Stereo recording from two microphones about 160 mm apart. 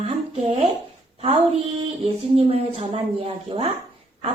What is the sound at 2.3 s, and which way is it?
Speech, 40° right (ahead or behind).